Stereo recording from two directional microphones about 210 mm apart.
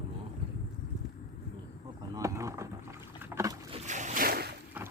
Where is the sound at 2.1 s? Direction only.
15° right (ahead or behind).